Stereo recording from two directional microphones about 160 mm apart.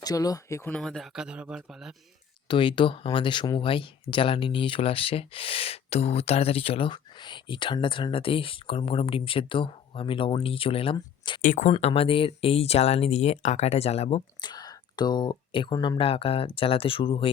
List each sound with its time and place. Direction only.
0.0 s speech: 25° left (ahead or behind); by 1.9 s 5° right (ahead or behind)
2.5 s speech: 30° left (ahead or behind)
11.4 s speech: 55° left (ahead or behind)
11.7 s speech: 40° left (ahead or behind)
14.4 s speech: 25° left (ahead or behind)